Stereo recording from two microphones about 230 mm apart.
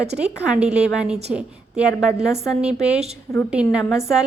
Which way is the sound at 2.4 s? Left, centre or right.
Centre.